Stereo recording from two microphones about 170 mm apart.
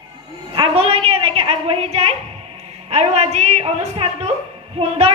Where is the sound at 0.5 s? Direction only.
30° right (ahead or behind).